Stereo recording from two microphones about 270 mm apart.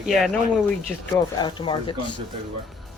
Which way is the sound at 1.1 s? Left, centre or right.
Centre.